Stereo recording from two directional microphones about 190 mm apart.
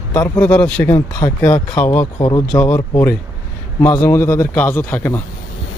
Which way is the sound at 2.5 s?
10° left (ahead or behind).